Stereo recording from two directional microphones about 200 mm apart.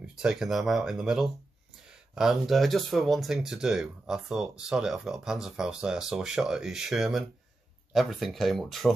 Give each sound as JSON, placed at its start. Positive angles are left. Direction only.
{"t": 0.0, "sound": "speech", "side_deg": -5}